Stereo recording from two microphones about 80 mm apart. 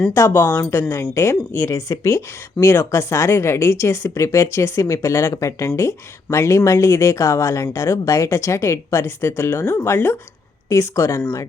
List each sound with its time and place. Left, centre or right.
0.1 s speech: left